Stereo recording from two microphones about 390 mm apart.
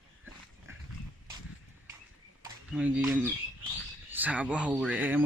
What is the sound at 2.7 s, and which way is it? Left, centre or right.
Speech, centre.